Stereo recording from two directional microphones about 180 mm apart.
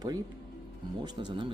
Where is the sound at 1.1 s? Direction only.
25° right (ahead or behind).